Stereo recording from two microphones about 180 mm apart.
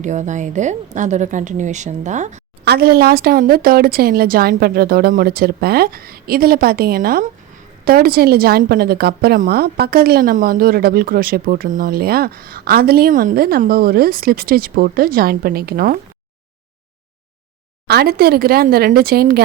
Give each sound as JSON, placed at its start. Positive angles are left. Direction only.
{"t": 0.0, "sound": "a woman's voice", "side_deg": -40}
{"t": 2.6, "sound": "a woman's voice", "side_deg": -60}
{"t": 17.8, "sound": "a woman's voice", "side_deg": -60}